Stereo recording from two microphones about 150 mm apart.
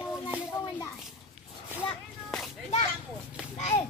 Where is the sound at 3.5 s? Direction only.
40° left (ahead or behind).